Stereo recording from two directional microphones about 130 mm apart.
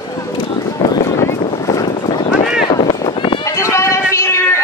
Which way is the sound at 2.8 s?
40° left (ahead or behind).